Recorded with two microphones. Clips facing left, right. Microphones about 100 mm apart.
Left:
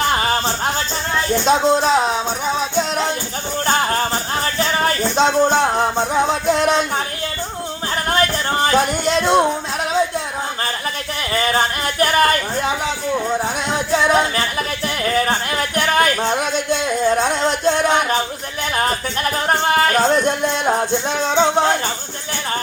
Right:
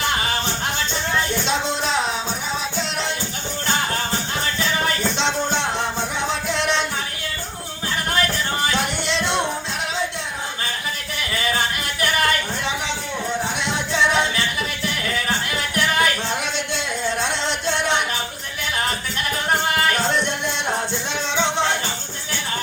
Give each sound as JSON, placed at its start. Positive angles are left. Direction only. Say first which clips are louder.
{"t": 0.1, "sound": "music", "louder": "left 5 dB", "side_deg": 40}
{"t": 1.5, "sound": "speech", "louder": "left 8 dB", "side_deg": 40}
{"t": 3.7, "sound": "music", "louder": "left 5 dB", "side_deg": 40}
{"t": 8.1, "sound": "music", "louder": "left 5 dB", "side_deg": 40}
{"t": 11.3, "sound": "a sound", "louder": "left 5 dB", "side_deg": 40}
{"t": 13.4, "sound": "music", "louder": "left 4 dB", "side_deg": 45}
{"t": 15.0, "sound": "a sound", "louder": "left 8 dB", "side_deg": 40}
{"t": 17.1, "sound": "music", "louder": "left 6 dB", "side_deg": 45}